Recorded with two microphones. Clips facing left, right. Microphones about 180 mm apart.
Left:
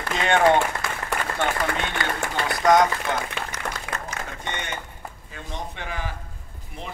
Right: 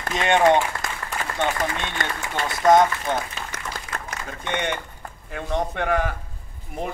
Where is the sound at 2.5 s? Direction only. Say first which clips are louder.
Right 2 dB; 25° right (ahead or behind).